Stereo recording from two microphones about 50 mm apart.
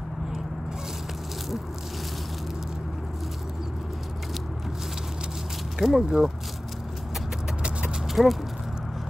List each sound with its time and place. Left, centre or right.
5.8 s speech: centre
8.1 s speech: centre